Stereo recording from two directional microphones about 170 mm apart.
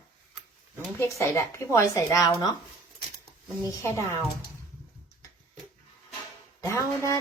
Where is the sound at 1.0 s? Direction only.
15° left (ahead or behind).